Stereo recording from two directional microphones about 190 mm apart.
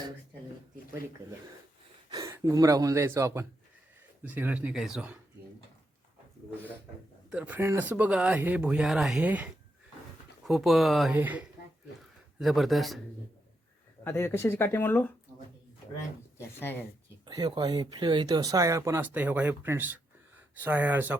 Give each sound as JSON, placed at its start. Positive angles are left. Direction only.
{"t": 2.0, "sound": "a sound", "side_deg": -20}
{"t": 2.3, "sound": "speech", "side_deg": -15}
{"t": 7.3, "sound": "speech", "side_deg": -5}
{"t": 14.0, "sound": "speech", "side_deg": 10}
{"t": 17.2, "sound": "speech", "side_deg": -20}